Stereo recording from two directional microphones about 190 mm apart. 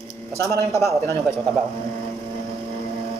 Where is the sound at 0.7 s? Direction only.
15° left (ahead or behind).